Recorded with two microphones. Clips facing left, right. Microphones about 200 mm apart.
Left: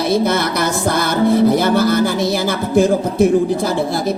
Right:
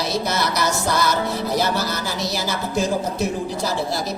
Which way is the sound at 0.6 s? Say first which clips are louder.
Left 4 dB; 55° left (ahead or behind).